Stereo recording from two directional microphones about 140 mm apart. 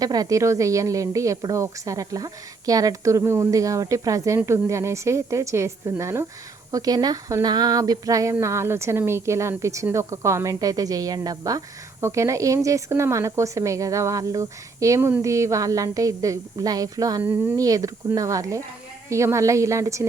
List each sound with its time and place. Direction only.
0.0 s speech: 25° right (ahead or behind)